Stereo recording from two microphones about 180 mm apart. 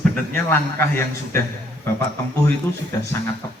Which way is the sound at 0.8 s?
10° left (ahead or behind).